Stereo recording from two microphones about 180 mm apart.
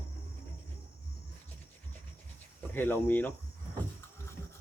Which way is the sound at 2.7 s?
10° left (ahead or behind).